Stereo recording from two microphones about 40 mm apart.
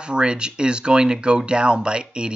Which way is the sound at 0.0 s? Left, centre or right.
Right.